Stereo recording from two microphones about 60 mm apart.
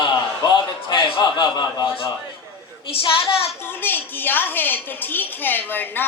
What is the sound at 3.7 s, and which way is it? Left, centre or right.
A woman's voice, left.